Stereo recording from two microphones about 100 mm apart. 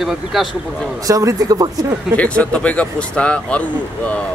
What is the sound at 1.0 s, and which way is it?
Speech, 35° right (ahead or behind).